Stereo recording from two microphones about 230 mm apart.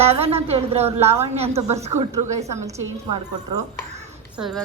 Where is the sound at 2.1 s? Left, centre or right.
Centre.